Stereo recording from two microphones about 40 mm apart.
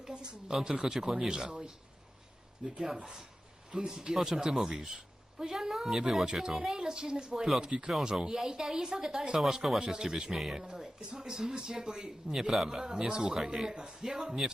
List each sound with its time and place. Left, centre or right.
0.0 s speech: centre
2.7 s speech: centre